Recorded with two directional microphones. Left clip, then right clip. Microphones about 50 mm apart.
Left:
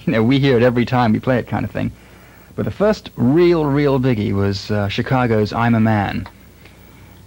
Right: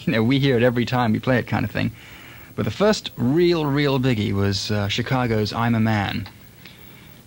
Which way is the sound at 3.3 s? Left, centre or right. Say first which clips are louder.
Left 5 dB; left.